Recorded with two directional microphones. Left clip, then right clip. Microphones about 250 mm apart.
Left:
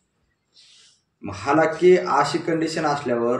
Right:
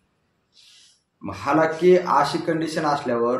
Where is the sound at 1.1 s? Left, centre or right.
Centre.